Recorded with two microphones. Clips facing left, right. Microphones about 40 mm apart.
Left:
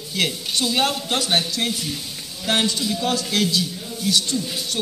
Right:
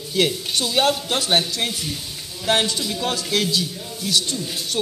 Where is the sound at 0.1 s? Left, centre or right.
Centre.